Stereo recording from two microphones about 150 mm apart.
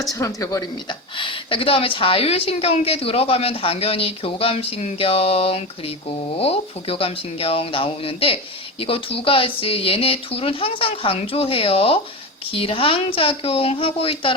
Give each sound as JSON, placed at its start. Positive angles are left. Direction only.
{"t": 0.1, "sound": "a woman's voice", "side_deg": 20}